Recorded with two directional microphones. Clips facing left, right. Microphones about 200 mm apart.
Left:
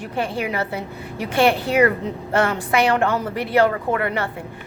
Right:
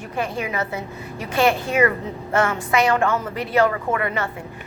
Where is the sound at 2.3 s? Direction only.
35° left (ahead or behind).